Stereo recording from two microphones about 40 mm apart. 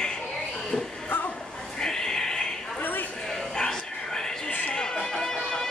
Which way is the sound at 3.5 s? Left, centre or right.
Centre.